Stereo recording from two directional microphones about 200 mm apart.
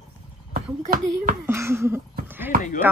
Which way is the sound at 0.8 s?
45° right (ahead or behind).